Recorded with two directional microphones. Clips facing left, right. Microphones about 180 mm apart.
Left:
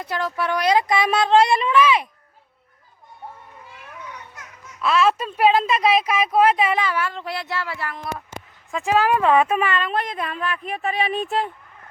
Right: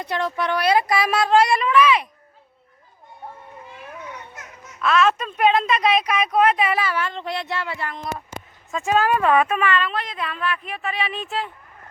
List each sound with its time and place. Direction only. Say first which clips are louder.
0.0 s speech: right 1 dB; centre (ahead or behind); by 1.7 s 25° left (ahead or behind)
1.7 s speech: even; centre (ahead or behind)
4.8 s speech: even; 5° left (ahead or behind)
6.7 s speech: left 1 dB; 15° left (ahead or behind)
8.7 s speech: left 1 dB; 15° left (ahead or behind)
9.3 s speech: left 1 dB; 30° left (ahead or behind); by 11.5 s 45° left (ahead or behind)